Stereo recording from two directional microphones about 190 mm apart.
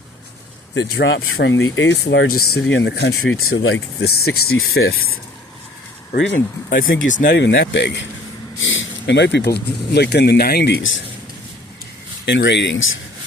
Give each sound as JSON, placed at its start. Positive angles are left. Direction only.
{"t": 0.7, "sound": "speech", "side_deg": 70}
{"t": 4.6, "sound": "speech", "side_deg": 55}
{"t": 6.1, "sound": "speech", "side_deg": 70}
{"t": 6.8, "sound": "speech", "side_deg": 90}
{"t": 7.1, "sound": "speech", "side_deg": 45}
{"t": 7.3, "sound": "speech", "side_deg": 65}
{"t": 8.5, "sound": "speech", "side_deg": 90}
{"t": 12.2, "sound": "speech", "side_deg": 70}